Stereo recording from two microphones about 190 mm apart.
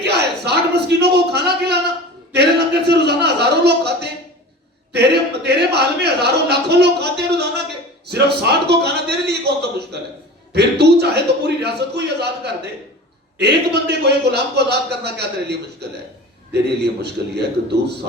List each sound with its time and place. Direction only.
0.0 s a sound: 60° right (ahead or behind)
8.0 s a man's voice: 60° right (ahead or behind)
13.4 s speech: 60° right (ahead or behind)